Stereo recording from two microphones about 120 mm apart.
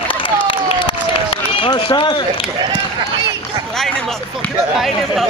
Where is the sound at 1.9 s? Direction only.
45° left (ahead or behind).